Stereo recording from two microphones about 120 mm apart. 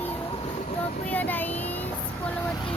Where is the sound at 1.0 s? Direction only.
15° left (ahead or behind).